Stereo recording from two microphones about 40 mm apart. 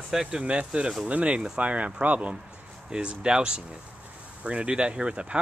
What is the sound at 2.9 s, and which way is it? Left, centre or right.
Speech, right.